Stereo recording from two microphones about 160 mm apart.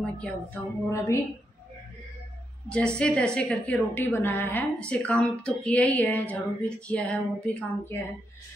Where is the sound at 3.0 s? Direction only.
5° left (ahead or behind).